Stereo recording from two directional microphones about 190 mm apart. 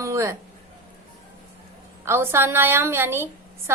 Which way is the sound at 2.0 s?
15° right (ahead or behind).